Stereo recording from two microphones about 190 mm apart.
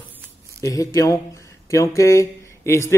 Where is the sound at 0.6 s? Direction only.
15° left (ahead or behind).